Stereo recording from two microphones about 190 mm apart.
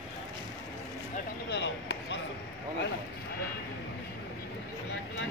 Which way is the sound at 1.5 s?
65° left (ahead or behind).